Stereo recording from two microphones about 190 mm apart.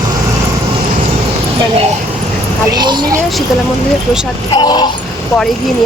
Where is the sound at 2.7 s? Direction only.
20° right (ahead or behind).